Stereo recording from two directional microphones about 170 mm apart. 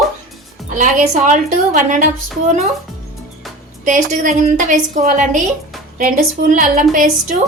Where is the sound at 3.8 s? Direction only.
45° right (ahead or behind).